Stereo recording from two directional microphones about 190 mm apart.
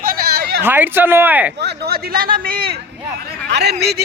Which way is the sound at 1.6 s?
60° right (ahead or behind).